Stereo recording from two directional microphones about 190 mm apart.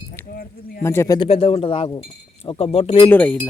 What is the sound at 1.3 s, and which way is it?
Speech, 30° left (ahead or behind).